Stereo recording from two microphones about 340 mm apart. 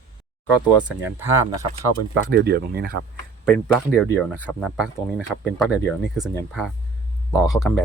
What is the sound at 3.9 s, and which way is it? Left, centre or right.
Speech, centre.